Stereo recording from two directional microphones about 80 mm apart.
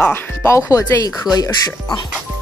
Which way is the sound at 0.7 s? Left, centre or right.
Left.